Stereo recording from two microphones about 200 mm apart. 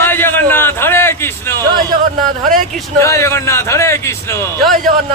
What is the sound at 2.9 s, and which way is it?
Speech, 15° left (ahead or behind).